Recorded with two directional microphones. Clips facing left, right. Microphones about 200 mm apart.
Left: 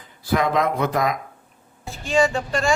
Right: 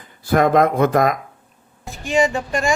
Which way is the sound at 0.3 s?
50° right (ahead or behind).